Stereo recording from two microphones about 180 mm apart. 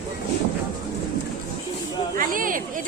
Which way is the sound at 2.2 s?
50° right (ahead or behind).